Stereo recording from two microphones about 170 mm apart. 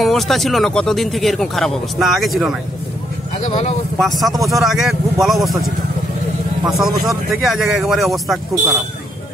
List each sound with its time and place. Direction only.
0.0 s speech: centre (ahead or behind)
3.3 s speech: 45° left (ahead or behind)
4.0 s speech: centre (ahead or behind)